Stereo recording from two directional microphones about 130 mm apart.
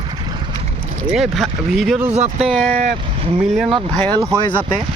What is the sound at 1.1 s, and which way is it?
Speech, centre (ahead or behind).